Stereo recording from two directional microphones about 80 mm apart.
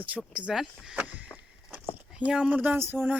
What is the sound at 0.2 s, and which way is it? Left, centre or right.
Speech, centre.